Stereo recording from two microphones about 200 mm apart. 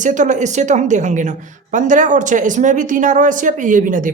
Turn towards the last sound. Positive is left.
turn(degrees=-40)  # may be behind; listen again after turning